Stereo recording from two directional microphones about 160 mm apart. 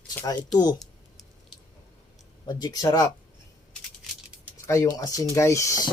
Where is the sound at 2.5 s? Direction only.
25° left (ahead or behind).